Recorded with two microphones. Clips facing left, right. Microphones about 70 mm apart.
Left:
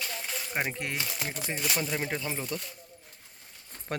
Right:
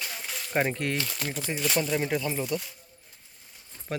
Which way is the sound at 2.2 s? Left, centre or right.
Left.